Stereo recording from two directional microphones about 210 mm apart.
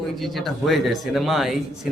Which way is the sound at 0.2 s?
Centre (ahead or behind).